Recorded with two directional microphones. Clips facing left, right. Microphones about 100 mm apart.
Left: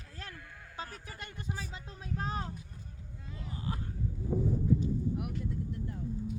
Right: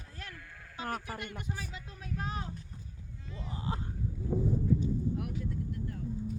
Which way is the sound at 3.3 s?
25° right (ahead or behind).